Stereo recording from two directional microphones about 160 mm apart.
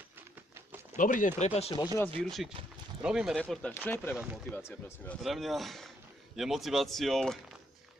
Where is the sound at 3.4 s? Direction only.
5° left (ahead or behind).